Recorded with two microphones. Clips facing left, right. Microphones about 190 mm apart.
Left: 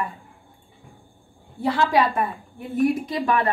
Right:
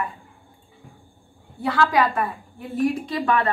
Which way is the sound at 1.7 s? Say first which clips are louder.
Even; 25° left (ahead or behind).